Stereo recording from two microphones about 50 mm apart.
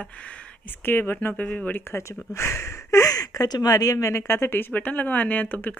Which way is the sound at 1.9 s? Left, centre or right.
Left.